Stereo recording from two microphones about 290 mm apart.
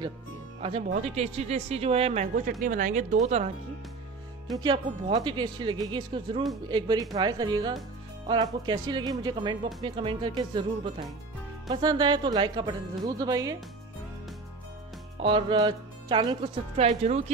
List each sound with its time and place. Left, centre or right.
0.6 s speech: centre
4.6 s speech: centre
15.2 s speech: centre